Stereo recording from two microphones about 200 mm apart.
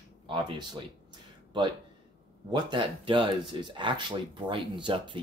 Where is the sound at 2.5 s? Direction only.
25° right (ahead or behind).